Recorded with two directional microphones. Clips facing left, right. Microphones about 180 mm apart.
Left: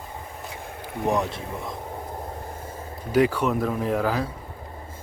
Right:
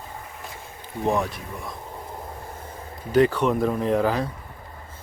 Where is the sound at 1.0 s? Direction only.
20° left (ahead or behind).